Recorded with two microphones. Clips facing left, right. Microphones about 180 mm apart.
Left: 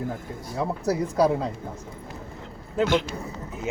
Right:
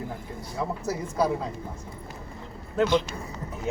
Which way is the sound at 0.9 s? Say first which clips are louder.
Left 6 dB; 35° left (ahead or behind).